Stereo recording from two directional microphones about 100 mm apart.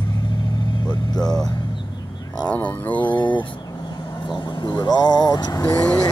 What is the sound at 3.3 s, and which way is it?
Speech, 55° left (ahead or behind).